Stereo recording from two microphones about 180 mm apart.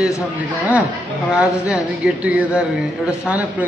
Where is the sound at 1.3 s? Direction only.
5° right (ahead or behind).